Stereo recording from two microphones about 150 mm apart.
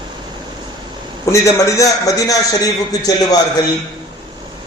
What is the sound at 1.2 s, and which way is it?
A man's voice, 20° left (ahead or behind).